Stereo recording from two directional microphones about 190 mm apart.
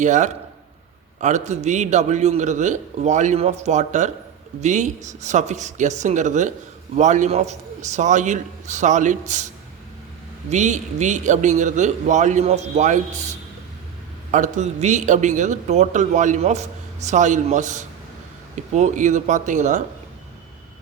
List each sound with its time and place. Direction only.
0.0 s a man's voice: 40° right (ahead or behind)
10.5 s a man's voice: 40° right (ahead or behind)